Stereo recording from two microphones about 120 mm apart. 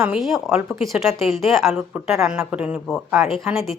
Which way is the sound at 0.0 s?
5° right (ahead or behind).